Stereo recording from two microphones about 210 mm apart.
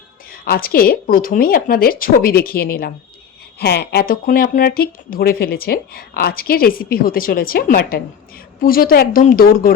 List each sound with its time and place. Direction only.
0.4 s speech: 45° left (ahead or behind)